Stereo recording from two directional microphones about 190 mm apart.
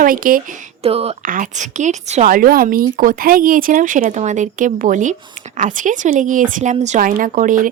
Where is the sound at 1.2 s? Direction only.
45° right (ahead or behind).